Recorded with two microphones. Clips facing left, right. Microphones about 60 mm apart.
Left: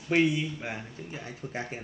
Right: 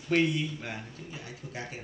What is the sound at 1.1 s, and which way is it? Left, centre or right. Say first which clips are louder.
Speech: left 5 dB; left.